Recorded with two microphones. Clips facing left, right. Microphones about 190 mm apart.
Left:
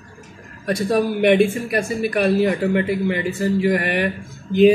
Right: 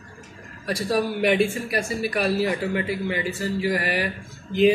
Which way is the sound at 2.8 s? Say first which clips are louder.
Left 5 dB; 50° left (ahead or behind).